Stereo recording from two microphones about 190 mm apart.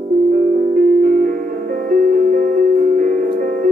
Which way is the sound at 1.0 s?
45° right (ahead or behind).